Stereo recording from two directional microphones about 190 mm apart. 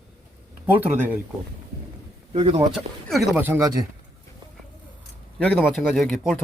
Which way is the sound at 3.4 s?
15° right (ahead or behind).